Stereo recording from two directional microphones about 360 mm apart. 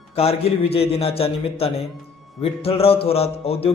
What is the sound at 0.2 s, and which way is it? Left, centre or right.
A man's voice, centre.